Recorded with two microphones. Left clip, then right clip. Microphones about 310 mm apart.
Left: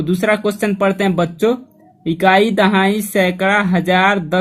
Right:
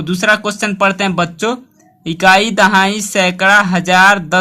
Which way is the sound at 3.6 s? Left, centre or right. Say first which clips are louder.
Right 3 dB; right.